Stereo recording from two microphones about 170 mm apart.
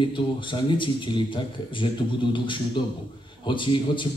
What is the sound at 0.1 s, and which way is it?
A man's voice, 30° left (ahead or behind).